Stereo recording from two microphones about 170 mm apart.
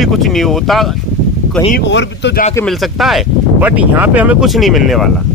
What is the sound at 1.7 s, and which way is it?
Speech, 90° left.